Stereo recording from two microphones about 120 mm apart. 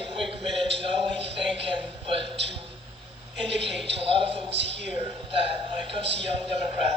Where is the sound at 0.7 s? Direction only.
55° right (ahead or behind).